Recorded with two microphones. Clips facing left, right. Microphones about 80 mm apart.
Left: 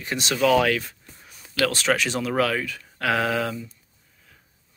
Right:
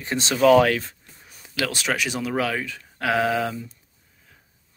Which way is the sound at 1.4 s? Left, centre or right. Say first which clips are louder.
Left 3 dB; centre.